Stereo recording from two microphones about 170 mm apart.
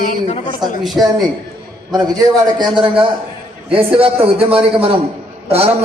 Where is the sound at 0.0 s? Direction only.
45° left (ahead or behind).